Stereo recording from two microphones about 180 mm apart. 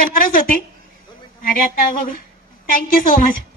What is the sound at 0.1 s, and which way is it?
A woman's voice, 50° left (ahead or behind).